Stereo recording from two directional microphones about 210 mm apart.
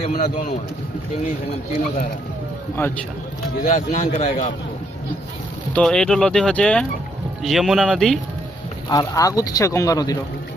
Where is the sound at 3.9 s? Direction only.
35° left (ahead or behind).